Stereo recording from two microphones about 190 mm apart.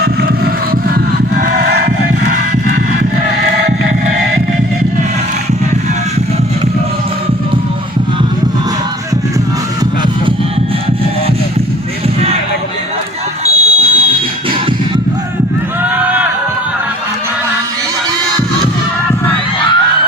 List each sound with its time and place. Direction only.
1.5 s crowd: 55° right (ahead or behind)
13.5 s fire alarm: 50° left (ahead or behind)
16.0 s music: 10° right (ahead or behind)